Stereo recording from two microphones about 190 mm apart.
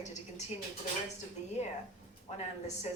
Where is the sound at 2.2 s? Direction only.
35° left (ahead or behind).